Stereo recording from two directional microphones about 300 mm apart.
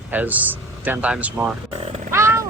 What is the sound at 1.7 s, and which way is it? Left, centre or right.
Speech, right.